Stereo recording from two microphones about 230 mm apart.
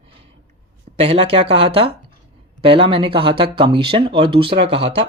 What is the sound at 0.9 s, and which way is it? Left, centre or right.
Speech, right.